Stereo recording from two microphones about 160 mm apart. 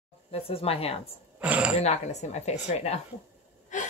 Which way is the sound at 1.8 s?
45° left (ahead or behind).